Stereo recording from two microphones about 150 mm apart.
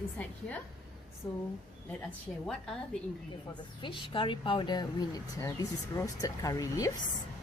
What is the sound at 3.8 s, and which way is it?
Speech, 35° left (ahead or behind).